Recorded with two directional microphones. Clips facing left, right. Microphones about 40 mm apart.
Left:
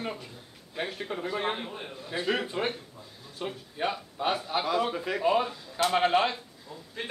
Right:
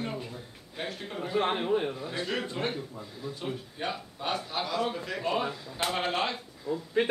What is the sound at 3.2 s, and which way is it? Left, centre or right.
Speech, centre.